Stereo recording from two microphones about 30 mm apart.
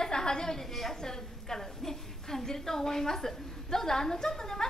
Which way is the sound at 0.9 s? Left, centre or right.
Centre.